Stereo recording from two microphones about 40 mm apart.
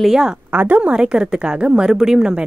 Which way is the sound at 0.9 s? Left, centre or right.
Centre.